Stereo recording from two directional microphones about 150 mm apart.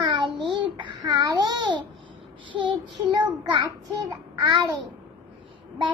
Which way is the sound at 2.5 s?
30° right (ahead or behind).